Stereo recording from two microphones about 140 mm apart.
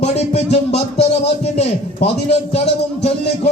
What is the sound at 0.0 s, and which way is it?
Music, 50° left (ahead or behind).